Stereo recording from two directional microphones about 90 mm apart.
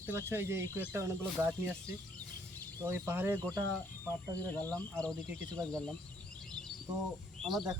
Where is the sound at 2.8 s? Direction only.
30° right (ahead or behind).